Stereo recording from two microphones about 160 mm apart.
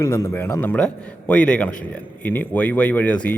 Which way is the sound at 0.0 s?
20° left (ahead or behind).